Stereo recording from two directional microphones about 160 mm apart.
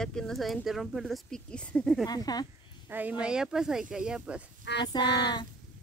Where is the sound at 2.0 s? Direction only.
25° left (ahead or behind).